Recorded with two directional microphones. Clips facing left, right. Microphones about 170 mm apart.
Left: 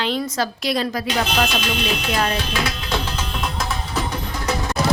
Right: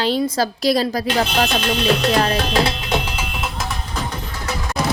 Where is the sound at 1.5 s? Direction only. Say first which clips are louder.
Right 5 dB; 55° right (ahead or behind).